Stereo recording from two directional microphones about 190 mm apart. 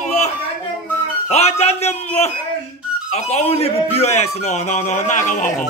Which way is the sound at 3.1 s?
35° left (ahead or behind).